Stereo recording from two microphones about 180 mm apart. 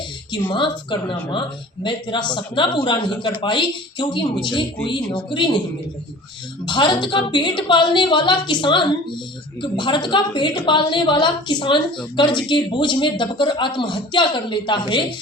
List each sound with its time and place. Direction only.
0.5 s speech: 25° left (ahead or behind)
6.7 s speech: 25° left (ahead or behind)